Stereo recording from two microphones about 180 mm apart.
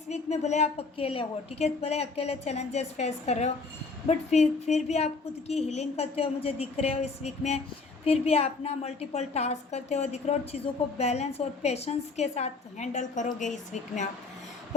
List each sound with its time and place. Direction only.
0.1 s a woman's voice: 40° left (ahead or behind)